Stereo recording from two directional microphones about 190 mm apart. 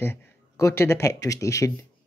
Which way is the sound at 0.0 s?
10° left (ahead or behind).